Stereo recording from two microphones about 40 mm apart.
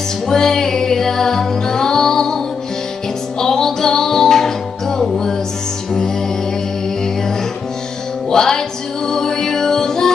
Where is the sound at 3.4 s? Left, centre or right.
Centre.